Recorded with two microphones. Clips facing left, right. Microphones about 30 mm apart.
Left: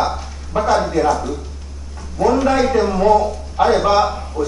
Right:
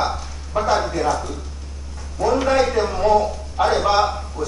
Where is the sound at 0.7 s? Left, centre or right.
Centre.